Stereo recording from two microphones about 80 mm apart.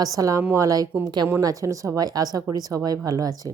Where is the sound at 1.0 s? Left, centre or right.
Right.